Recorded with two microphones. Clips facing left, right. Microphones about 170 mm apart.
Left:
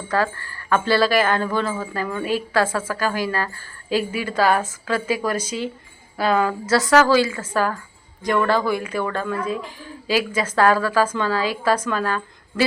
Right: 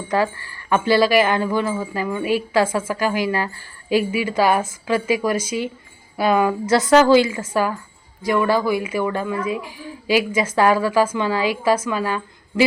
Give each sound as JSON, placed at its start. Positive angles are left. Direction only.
{"t": 0.1, "sound": "a woman's voice", "side_deg": -15}
{"t": 7.5, "sound": "a woman's voice", "side_deg": -15}